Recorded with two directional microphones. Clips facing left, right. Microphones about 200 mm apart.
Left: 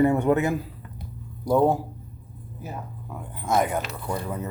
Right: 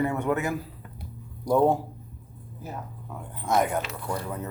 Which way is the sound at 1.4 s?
5° left (ahead or behind).